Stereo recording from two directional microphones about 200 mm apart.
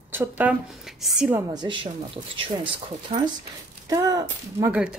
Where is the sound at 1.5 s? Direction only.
20° right (ahead or behind).